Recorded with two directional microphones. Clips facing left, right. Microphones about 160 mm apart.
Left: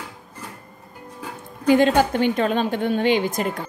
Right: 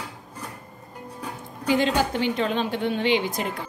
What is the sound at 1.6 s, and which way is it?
A woman's voice, 50° left (ahead or behind).